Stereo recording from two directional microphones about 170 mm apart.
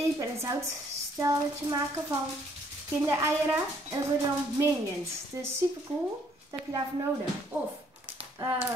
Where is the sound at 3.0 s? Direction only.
15° right (ahead or behind).